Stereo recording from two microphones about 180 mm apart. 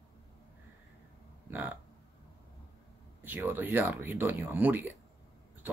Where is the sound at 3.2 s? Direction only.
10° right (ahead or behind).